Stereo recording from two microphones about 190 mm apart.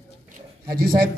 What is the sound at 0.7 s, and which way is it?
Speech, 50° right (ahead or behind).